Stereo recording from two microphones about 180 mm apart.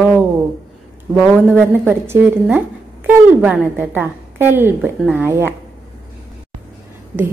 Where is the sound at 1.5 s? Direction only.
10° right (ahead or behind).